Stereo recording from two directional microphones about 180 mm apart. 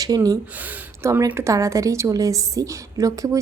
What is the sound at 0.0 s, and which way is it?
Speech, 20° right (ahead or behind).